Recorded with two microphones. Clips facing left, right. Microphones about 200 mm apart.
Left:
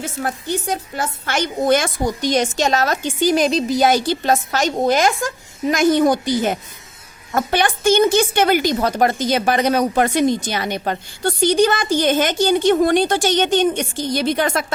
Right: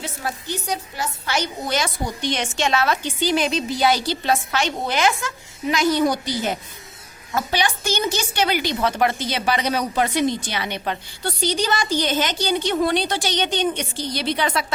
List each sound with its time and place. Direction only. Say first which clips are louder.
0.0 s speech: left 5 dB; 55° left (ahead or behind)